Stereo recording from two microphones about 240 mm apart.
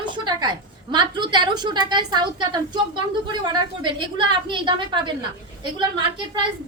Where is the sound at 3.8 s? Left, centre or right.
Centre.